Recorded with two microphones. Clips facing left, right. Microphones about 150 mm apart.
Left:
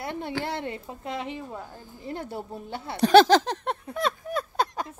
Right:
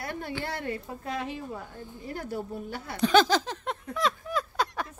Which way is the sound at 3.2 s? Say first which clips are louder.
Left 7 dB; 45° left (ahead or behind).